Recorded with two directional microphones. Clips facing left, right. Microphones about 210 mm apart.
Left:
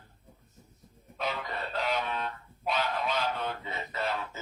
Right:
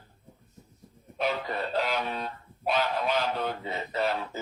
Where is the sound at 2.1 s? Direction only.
35° right (ahead or behind).